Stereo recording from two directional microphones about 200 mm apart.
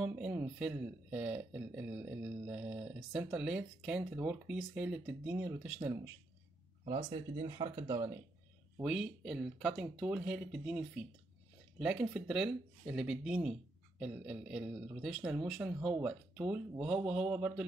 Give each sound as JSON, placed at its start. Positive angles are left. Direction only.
{"t": 0.0, "sound": "speech", "side_deg": -10}
{"t": 6.8, "sound": "speech", "side_deg": -25}
{"t": 8.7, "sound": "speech", "side_deg": 0}